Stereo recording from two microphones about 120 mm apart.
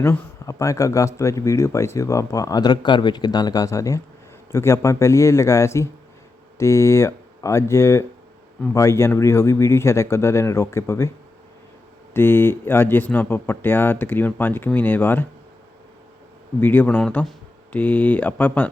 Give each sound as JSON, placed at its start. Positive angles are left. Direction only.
{"t": 0.0, "sound": "speech", "side_deg": 25}
{"t": 12.1, "sound": "speech", "side_deg": 20}
{"t": 16.6, "sound": "speech", "side_deg": 15}